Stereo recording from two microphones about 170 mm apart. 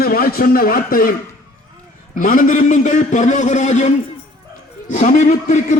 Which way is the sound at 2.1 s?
50° left (ahead or behind).